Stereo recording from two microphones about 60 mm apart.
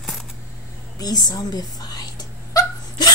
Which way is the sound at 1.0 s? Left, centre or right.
Left.